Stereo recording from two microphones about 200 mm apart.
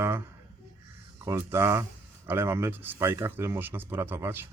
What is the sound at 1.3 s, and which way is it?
Speech, 15° right (ahead or behind).